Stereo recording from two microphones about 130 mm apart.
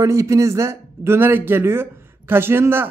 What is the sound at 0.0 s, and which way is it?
Speech, 25° right (ahead or behind).